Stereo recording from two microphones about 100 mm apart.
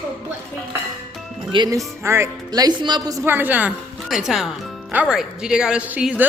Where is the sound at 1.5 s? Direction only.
55° right (ahead or behind).